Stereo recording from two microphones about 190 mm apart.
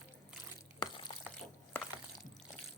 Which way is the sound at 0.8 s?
25° left (ahead or behind).